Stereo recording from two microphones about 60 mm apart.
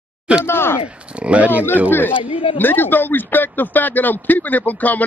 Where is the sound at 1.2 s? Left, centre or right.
Right.